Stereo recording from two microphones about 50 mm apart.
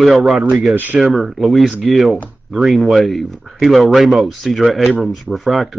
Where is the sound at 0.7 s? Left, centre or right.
Right.